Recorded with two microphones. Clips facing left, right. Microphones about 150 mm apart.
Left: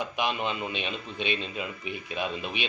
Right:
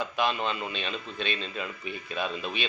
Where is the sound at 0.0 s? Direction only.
15° left (ahead or behind).